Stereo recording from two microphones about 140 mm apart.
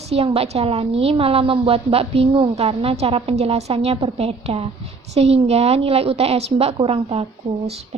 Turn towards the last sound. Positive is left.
turn(degrees=-45)  # may be behind; listen again after turning